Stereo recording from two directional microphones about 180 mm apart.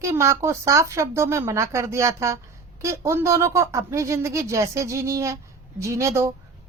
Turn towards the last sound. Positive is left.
turn(degrees=-15)  # may be behind; listen again after turning